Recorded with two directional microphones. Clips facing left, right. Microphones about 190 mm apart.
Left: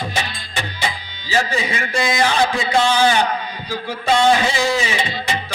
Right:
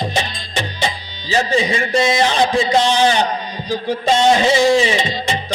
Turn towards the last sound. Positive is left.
turn(degrees=-25)  # may be behind; listen again after turning